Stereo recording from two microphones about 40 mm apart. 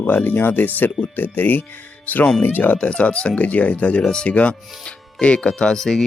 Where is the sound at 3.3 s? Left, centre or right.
Left.